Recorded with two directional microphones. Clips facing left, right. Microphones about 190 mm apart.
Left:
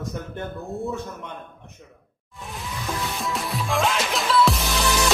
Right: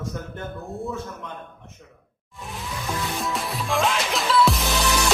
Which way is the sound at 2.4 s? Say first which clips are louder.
Even; centre (ahead or behind).